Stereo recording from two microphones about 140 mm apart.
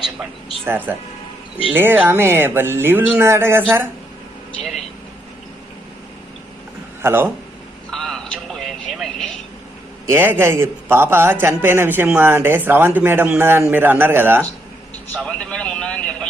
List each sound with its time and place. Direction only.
0.0 s speech: 5° right (ahead or behind)
0.6 s a man's voice: 15° right (ahead or behind)
7.0 s speech: 15° right (ahead or behind)
7.9 s vehicle: 5° left (ahead or behind)
10.1 s a man's voice: 15° right (ahead or behind)
15.1 s vehicle: 10° left (ahead or behind)